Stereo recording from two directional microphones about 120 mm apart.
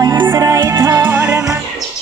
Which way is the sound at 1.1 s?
20° right (ahead or behind).